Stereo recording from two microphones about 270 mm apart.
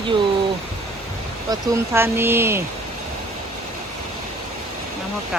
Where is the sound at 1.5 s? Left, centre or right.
Centre.